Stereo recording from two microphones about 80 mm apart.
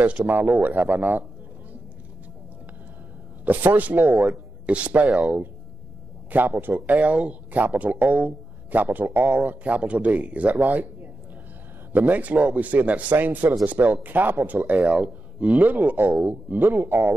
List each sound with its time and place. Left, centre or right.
0.0 s speech: centre
3.4 s speech: right
11.9 s speech: right